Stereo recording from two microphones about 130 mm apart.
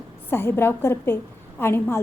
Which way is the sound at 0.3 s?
15° left (ahead or behind).